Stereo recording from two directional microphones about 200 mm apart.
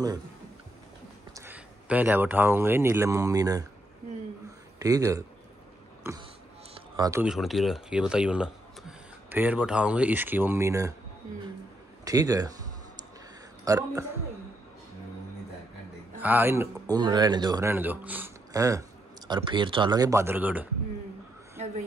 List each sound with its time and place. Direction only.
1.3 s speech: 10° right (ahead or behind)
4.7 s speech: 15° right (ahead or behind)
7.2 s speech: centre (ahead or behind)
12.0 s speech: 15° right (ahead or behind)
13.7 s speech: 15° right (ahead or behind)
16.2 s speech: 10° right (ahead or behind)